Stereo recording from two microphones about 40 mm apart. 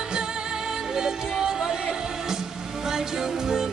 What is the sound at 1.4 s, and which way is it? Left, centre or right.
Music, centre.